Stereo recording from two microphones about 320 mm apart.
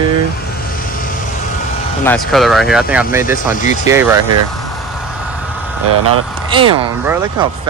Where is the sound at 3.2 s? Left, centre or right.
Left.